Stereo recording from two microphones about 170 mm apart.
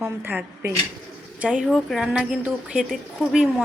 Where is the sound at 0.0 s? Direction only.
10° right (ahead or behind).